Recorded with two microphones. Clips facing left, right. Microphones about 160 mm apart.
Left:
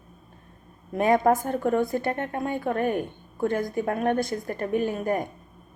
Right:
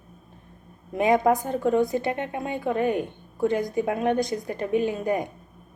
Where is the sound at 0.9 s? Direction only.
15° right (ahead or behind).